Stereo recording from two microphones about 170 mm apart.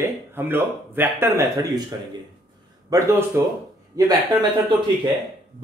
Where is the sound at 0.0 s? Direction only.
15° right (ahead or behind).